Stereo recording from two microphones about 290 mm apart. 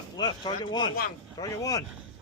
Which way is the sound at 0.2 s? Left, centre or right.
Centre.